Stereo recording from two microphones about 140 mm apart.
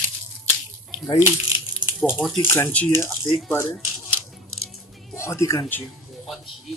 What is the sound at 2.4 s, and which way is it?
Speech, 15° left (ahead or behind).